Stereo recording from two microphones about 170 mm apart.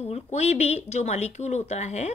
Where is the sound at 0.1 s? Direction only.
40° left (ahead or behind).